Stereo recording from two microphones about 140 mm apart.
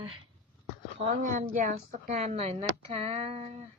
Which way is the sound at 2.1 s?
50° right (ahead or behind).